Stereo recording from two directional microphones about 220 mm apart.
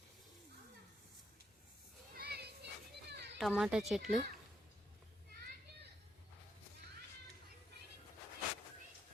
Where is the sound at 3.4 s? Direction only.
Centre (ahead or behind).